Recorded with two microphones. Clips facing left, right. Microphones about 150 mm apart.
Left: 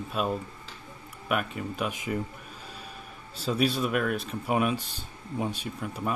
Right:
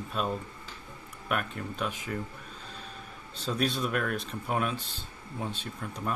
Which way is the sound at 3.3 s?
5° left (ahead or behind).